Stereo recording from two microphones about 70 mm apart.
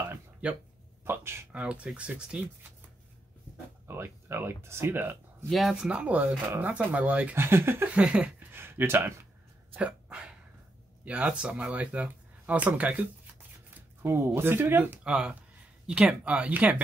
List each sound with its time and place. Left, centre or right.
1.0 s speech: right
1.5 s speech: centre
3.8 s speech: right
5.5 s speech: centre
5.9 s speech: centre
7.3 s speech: right
7.9 s speech: centre
8.5 s speech: right
9.8 s dog: centre
11.1 s speech: centre
14.0 s speech: right
15.0 s speech: centre